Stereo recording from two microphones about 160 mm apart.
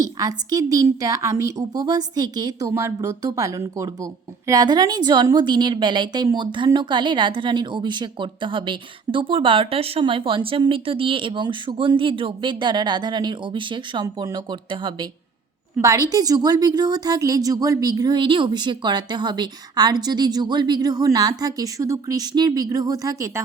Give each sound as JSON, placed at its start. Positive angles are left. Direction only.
{"t": 0.0, "sound": "a woman's voice", "side_deg": -25}